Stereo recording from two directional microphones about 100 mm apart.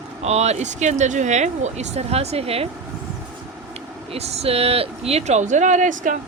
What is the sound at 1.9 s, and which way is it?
Speech, 90° right.